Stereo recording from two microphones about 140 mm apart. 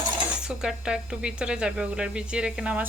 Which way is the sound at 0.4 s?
5° right (ahead or behind).